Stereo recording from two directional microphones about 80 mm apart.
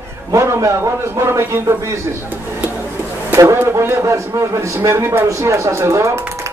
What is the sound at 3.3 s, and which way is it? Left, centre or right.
A man's voice, right.